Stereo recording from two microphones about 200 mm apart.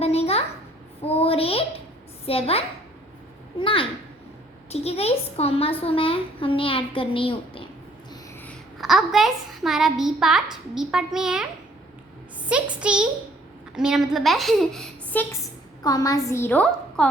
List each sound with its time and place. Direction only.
0.0 s a sound: 30° left (ahead or behind)
2.2 s a woman's voice: 30° left (ahead or behind)
8.4 s a woman's voice: centre (ahead or behind)
12.8 s a woman's voice: 5° right (ahead or behind)